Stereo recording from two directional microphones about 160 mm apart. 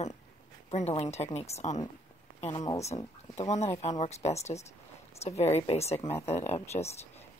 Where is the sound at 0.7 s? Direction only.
40° left (ahead or behind).